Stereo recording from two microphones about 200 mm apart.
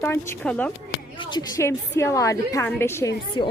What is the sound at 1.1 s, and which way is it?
A woman's voice, 25° left (ahead or behind).